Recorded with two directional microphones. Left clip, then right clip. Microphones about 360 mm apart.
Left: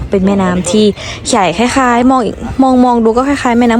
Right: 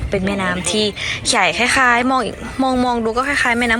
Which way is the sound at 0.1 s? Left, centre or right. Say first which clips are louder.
Left 7 dB; centre.